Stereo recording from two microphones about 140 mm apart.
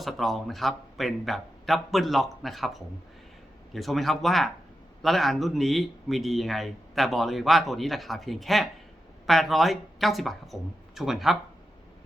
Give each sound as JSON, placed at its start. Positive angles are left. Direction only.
{"t": 0.0, "sound": "speech", "side_deg": 0}